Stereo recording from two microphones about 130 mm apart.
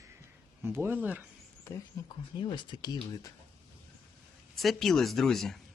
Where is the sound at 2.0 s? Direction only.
25° left (ahead or behind).